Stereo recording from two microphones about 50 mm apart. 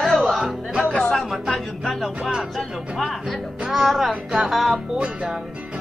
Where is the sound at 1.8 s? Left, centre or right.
Centre.